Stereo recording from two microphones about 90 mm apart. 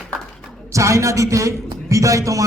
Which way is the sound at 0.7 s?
35° right (ahead or behind).